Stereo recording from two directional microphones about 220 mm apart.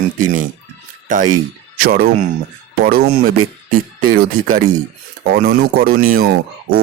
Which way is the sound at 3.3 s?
75° right (ahead or behind).